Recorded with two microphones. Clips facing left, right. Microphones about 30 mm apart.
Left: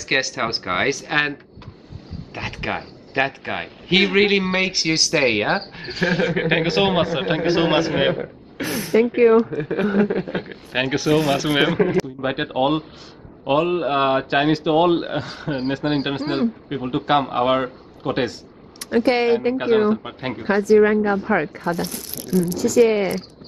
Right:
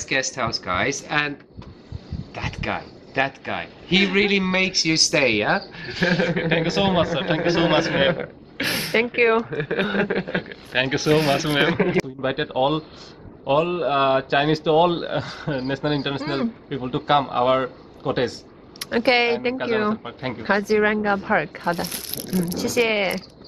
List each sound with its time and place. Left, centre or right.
0.0 s speech: left; by 5.6 s centre
5.9 s speech: centre
6.3 s speech: centre
8.5 s a sound: right
9.1 s speech: right
10.4 s speech: centre
11.5 s a woman's voice: right
12.0 s speech: centre
18.8 s speech: right
19.5 s speech: centre
20.0 s speech: centre
20.4 s a woman's voice: right
21.5 s speech: right